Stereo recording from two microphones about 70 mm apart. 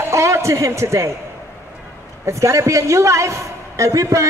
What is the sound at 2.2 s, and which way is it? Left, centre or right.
A woman's voice, right.